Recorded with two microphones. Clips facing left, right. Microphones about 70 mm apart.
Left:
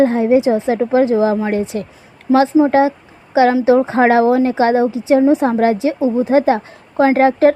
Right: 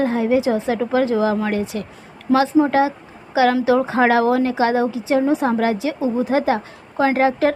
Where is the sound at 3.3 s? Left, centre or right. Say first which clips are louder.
Left 4 dB; left.